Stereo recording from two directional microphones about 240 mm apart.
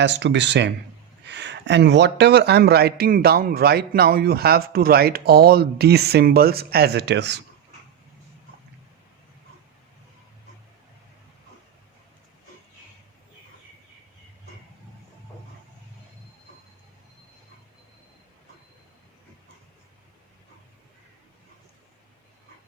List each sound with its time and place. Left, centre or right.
0.0 s speech: right